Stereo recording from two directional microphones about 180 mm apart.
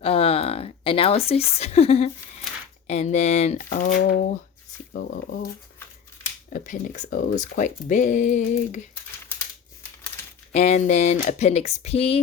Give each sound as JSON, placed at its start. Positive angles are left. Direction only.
{"t": 0.0, "sound": "a sound", "side_deg": 30}
{"t": 1.3, "sound": "speech", "side_deg": 35}
{"t": 3.7, "sound": "speech", "side_deg": 50}
{"t": 4.9, "sound": "speech", "side_deg": 65}
{"t": 6.5, "sound": "speech", "side_deg": 45}
{"t": 10.1, "sound": "coin", "side_deg": 10}
{"t": 10.5, "sound": "speech", "side_deg": 40}